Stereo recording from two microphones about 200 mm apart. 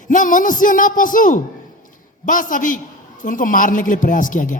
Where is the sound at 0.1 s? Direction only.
40° left (ahead or behind).